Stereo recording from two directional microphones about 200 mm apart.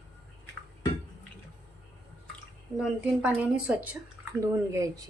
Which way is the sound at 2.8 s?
5° right (ahead or behind).